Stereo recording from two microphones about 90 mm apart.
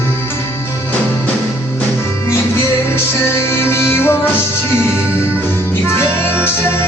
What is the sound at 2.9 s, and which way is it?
Music, 30° left (ahead or behind).